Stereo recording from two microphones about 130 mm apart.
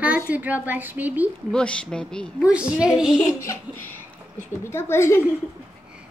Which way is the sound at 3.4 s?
20° left (ahead or behind).